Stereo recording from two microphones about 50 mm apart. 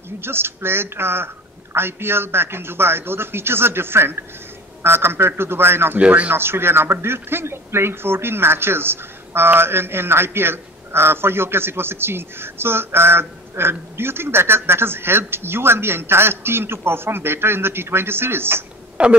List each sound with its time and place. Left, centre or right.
0.2 s a man's voice: right
5.9 s speech: right
6.3 s a man's voice: right
19.0 s speech: right